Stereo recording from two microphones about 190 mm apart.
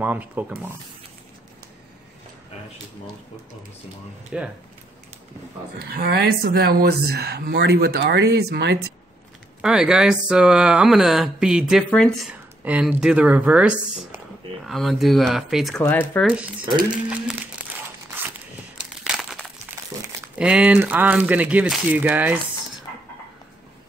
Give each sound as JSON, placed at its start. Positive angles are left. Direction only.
{"t": 0.0, "sound": "speech", "side_deg": -10}
{"t": 4.3, "sound": "speech", "side_deg": -5}
{"t": 5.8, "sound": "speech", "side_deg": -55}
{"t": 9.6, "sound": "speech", "side_deg": -5}
{"t": 12.6, "sound": "speech", "side_deg": -5}
{"t": 15.8, "sound": "speech", "side_deg": 10}
{"t": 19.0, "sound": "crumpling", "side_deg": -5}
{"t": 20.3, "sound": "speech", "side_deg": -5}